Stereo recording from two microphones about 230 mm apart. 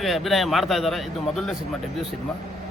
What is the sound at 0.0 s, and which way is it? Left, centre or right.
A man's voice, centre.